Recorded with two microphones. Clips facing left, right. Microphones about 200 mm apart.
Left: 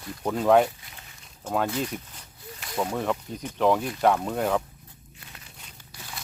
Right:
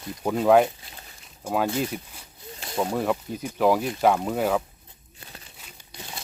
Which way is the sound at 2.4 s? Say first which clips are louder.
Right 2 dB; 25° right (ahead or behind).